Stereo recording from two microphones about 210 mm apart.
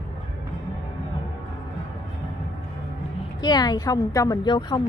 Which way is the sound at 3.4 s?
20° left (ahead or behind).